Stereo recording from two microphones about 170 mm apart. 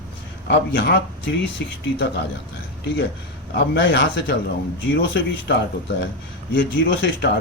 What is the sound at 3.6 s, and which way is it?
Speech, 85° left.